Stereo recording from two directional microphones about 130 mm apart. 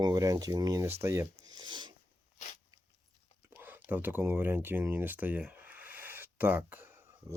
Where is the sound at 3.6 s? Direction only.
15° right (ahead or behind).